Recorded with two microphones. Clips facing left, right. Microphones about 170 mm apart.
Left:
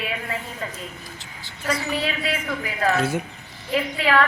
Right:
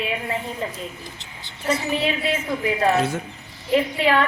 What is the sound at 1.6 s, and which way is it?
Speech, 25° right (ahead or behind).